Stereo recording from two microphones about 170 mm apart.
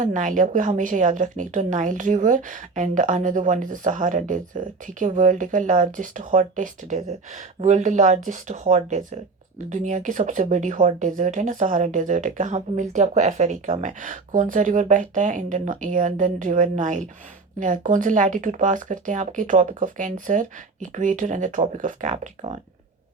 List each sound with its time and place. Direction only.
0.0 s a woman's voice: 45° right (ahead or behind)